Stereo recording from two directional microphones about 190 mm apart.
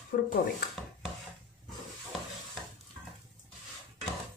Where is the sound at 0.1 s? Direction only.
50° left (ahead or behind).